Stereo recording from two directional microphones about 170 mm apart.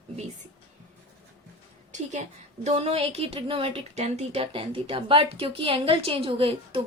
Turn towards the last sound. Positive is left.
turn(degrees=-35)  # may be behind; listen again after turning